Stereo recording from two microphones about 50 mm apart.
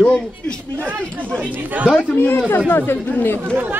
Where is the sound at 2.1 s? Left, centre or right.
Left.